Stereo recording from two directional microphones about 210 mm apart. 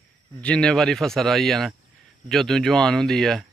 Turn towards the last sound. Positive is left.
turn(degrees=0)  # may be behind; listen again after turning